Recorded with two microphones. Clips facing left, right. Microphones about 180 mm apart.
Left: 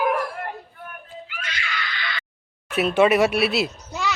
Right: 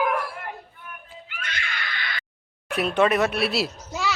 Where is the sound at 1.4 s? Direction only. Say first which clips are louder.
Left 1 dB; 55° right (ahead or behind).